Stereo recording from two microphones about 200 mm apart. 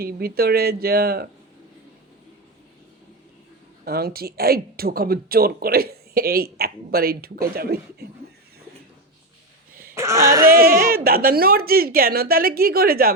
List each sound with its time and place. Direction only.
0.0 s speech: 50° right (ahead or behind)
3.8 s speech: 50° right (ahead or behind)
9.9 s speech: 15° right (ahead or behind)
10.4 s speech: 45° right (ahead or behind)